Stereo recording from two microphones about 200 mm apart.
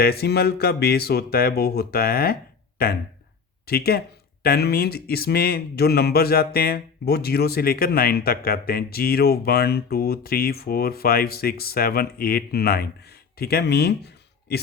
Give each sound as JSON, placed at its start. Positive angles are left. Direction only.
{"t": 0.0, "sound": "speech", "side_deg": 50}